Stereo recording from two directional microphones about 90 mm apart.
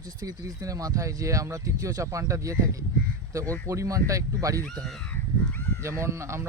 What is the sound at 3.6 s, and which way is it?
Speech, 35° right (ahead or behind).